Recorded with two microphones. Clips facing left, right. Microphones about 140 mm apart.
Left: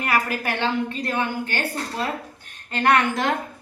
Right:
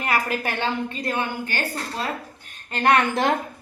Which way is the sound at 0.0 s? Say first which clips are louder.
Left 1 dB; 20° right (ahead or behind).